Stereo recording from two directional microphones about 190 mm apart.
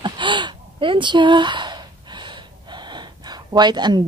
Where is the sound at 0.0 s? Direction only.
25° right (ahead or behind).